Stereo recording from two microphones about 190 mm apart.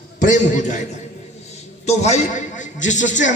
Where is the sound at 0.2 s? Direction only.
45° left (ahead or behind).